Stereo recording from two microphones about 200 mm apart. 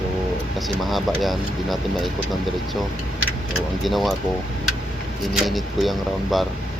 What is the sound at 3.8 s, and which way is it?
Speech, centre (ahead or behind).